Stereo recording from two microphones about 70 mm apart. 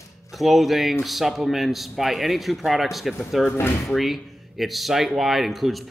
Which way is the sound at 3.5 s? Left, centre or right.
Left.